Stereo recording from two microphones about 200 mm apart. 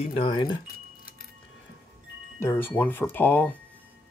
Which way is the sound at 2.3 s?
10° left (ahead or behind).